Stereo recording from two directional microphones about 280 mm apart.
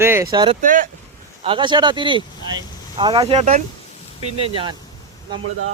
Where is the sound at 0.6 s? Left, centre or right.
Right.